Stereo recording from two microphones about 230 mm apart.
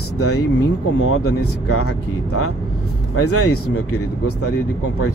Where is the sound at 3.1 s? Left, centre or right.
Left.